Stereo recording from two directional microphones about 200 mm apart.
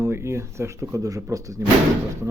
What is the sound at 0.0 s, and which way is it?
Speech, 10° right (ahead or behind).